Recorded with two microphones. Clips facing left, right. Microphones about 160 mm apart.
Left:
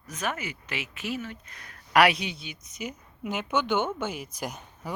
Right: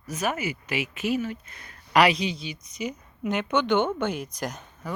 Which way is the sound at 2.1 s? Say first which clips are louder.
Right 6 dB; 55° left (ahead or behind).